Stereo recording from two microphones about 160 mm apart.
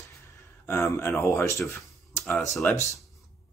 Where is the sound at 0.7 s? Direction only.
15° left (ahead or behind).